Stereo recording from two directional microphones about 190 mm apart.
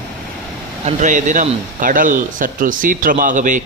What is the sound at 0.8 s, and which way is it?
Speech, 40° right (ahead or behind).